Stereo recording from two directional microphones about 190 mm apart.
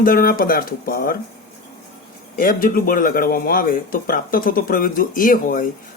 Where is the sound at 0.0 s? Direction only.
50° left (ahead or behind).